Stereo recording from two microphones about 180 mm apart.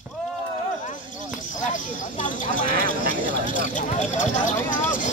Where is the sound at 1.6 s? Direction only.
45° left (ahead or behind).